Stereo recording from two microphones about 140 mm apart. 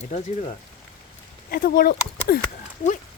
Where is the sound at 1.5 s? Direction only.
90° left.